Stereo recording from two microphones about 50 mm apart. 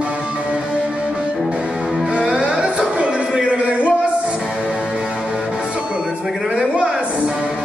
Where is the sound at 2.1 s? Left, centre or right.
Right.